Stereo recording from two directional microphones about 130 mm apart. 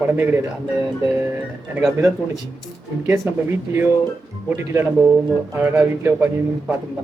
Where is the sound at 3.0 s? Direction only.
20° right (ahead or behind).